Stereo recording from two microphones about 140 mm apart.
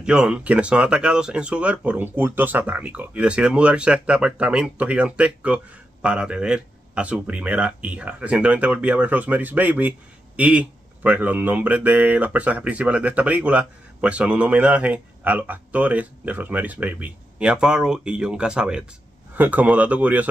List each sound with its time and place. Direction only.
0.0 s speech: 5° right (ahead or behind)